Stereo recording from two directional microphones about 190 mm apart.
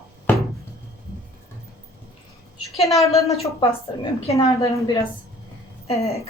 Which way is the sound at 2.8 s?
Centre (ahead or behind).